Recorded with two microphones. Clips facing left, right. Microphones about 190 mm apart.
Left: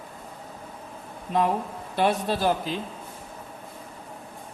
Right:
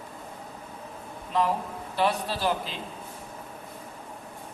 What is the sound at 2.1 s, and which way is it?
Speech, 45° left (ahead or behind).